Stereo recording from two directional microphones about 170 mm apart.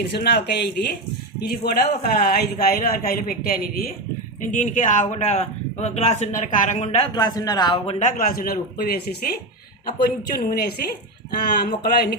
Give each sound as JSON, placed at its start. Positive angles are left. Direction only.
{"t": 0.0, "sound": "a man's voice", "side_deg": 75}
{"t": 4.5, "sound": "speech", "side_deg": 45}
{"t": 7.1, "sound": "speech", "side_deg": 25}
{"t": 7.9, "sound": "a man's voice", "side_deg": 55}